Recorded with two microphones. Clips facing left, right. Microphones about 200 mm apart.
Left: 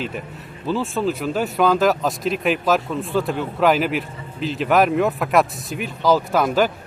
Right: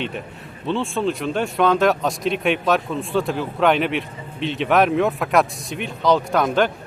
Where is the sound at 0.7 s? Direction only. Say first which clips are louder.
Even; 5° left (ahead or behind).